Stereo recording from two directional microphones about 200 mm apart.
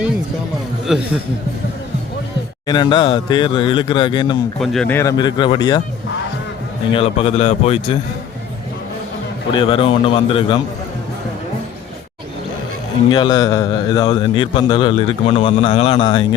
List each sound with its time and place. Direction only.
0.9 s a man's voice: 5° right (ahead or behind)
2.6 s a man's voice: 20° left (ahead or behind)
4.6 s a man's voice: centre (ahead or behind); by 5.8 s 20° left (ahead or behind)
6.9 s a man's voice: 30° left (ahead or behind)
9.5 s a man's voice: 25° left (ahead or behind)
13.1 s a man's voice: 20° left (ahead or behind)